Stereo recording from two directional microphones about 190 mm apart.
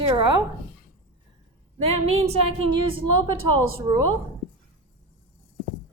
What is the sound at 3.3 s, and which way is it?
Speech, 90° right.